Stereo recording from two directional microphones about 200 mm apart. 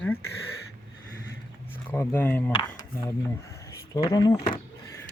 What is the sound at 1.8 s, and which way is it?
Speech, 10° left (ahead or behind).